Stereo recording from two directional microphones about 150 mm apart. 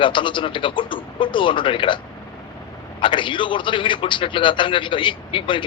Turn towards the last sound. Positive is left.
turn(degrees=35)  # may be behind; listen again after turning